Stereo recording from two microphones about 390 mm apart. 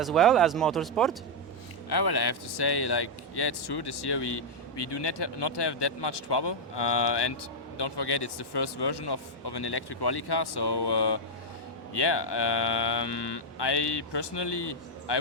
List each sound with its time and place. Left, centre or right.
0.0 s speech: centre
1.9 s a man's voice: left